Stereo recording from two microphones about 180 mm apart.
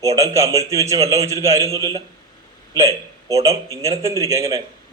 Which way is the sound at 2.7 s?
20° right (ahead or behind).